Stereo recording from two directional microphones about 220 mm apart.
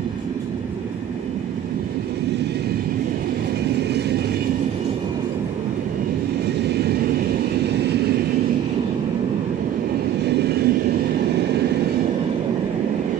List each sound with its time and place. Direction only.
10.2 s vehicle: 50° right (ahead or behind)